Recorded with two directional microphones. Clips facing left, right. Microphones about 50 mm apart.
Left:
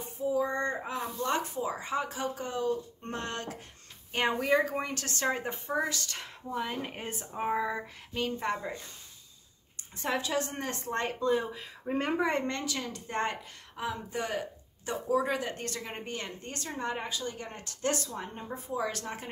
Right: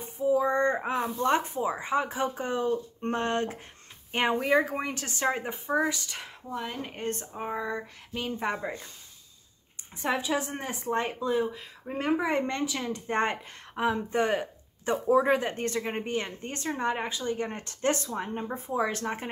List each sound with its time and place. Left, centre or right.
0.2 s a sound: right
1.1 s speech: right; by 6.3 s centre
6.5 s speech: centre
9.9 s speech: centre
12.4 s a woman's voice: centre